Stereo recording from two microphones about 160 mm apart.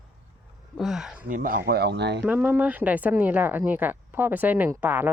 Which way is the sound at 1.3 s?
60° right (ahead or behind).